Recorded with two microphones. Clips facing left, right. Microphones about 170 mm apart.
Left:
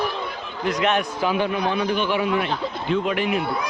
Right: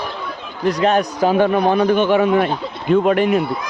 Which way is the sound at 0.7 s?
35° right (ahead or behind).